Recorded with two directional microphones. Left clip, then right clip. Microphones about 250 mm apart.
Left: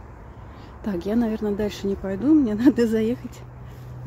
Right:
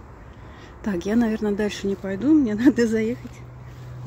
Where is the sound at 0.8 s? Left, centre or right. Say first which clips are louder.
Right 1 dB; centre.